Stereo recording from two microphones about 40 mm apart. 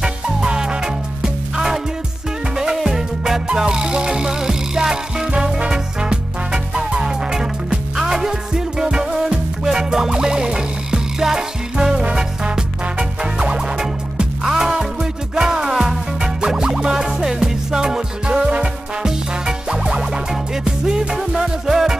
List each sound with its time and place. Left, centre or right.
0.0 s music: centre
21.1 s music: centre